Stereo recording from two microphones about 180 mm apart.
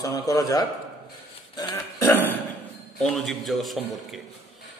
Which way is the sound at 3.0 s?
Centre (ahead or behind).